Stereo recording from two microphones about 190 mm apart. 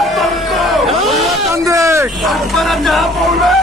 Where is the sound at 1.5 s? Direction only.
15° right (ahead or behind).